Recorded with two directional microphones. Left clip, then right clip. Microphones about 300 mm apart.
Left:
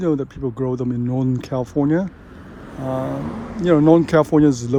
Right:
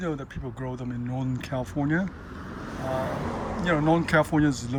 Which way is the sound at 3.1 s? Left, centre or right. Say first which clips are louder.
Left 3 dB; right.